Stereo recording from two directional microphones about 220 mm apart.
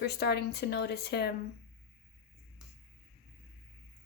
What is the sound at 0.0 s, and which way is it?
Speech, 50° left (ahead or behind).